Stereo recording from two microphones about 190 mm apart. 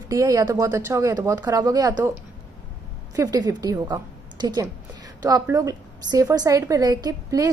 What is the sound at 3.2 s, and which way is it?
A woman's voice, 20° right (ahead or behind).